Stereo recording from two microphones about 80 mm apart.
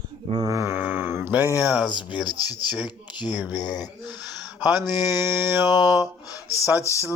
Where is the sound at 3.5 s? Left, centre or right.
Left.